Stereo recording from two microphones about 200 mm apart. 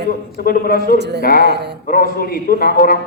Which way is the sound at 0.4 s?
45° left (ahead or behind).